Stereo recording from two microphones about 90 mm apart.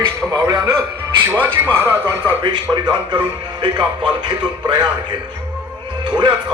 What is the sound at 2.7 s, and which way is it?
Speech, 55° right (ahead or behind).